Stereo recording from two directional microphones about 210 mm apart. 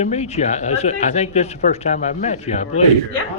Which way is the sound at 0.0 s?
30° left (ahead or behind).